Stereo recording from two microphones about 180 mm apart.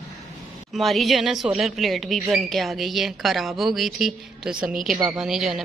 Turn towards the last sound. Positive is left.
turn(degrees=0)  # may be behind; listen again after turning